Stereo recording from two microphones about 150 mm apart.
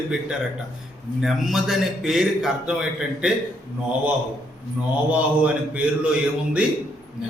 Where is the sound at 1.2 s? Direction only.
Centre (ahead or behind).